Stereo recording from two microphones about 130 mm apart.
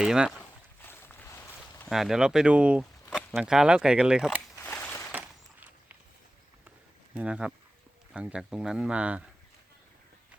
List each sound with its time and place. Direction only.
0.0 s speech: 5° right (ahead or behind)
0.9 s boat: 15° left (ahead or behind)
1.9 s speech: 5° right (ahead or behind)
4.7 s a sound: 10° left (ahead or behind)
7.2 s speech: 10° right (ahead or behind)